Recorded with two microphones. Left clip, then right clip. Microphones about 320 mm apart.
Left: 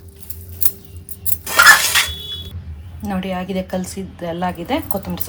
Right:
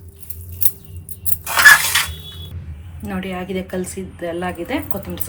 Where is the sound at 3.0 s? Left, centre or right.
Left.